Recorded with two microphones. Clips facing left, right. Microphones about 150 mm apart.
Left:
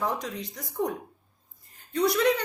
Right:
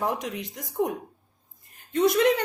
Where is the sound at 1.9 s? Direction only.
20° right (ahead or behind).